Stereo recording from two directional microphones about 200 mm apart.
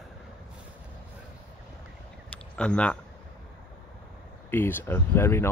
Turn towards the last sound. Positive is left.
turn(degrees=10)  # may be behind; listen again after turning